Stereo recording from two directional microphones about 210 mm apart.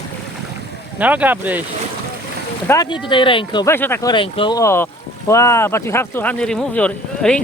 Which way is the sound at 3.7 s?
10° left (ahead or behind).